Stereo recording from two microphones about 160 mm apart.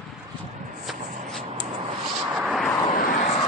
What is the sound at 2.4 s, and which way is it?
Vehicle, centre (ahead or behind).